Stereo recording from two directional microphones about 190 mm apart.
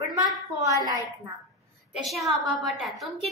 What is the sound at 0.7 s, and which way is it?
Speech, 20° right (ahead or behind).